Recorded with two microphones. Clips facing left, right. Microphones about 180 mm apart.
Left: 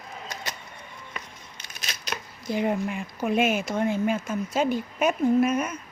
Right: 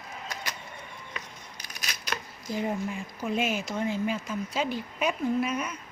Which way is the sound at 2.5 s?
65° left (ahead or behind).